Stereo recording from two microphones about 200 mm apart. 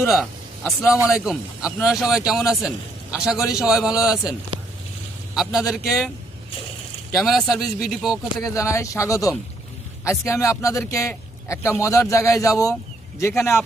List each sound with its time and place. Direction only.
0.1 s a sound: centre (ahead or behind)
1.0 s a man's voice: centre (ahead or behind)
7.2 s speech: centre (ahead or behind)
8.4 s speech: 15° left (ahead or behind)